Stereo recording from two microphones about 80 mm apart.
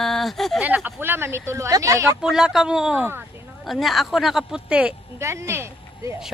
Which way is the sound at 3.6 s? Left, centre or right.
Centre.